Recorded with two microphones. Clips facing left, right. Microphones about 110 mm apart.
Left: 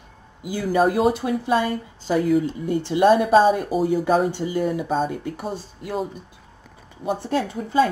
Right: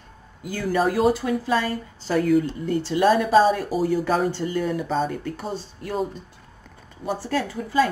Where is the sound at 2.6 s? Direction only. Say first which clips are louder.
Left 2 dB; 15° left (ahead or behind).